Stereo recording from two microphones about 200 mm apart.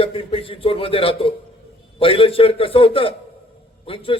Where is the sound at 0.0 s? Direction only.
25° left (ahead or behind).